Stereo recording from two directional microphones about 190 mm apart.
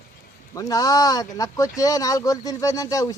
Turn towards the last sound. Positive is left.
turn(degrees=20)  # may be behind; listen again after turning